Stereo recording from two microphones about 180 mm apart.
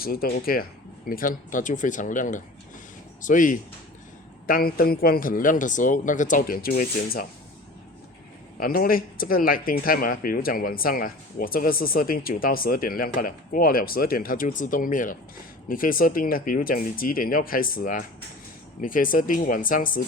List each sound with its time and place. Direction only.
0.0 s speech: 55° left (ahead or behind)
8.5 s speech: 55° left (ahead or behind)